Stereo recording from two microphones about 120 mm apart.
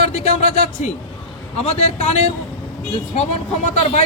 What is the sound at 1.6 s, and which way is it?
Speech, 65° left (ahead or behind).